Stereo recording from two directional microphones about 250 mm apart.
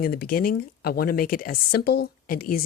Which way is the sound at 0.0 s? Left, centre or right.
Left.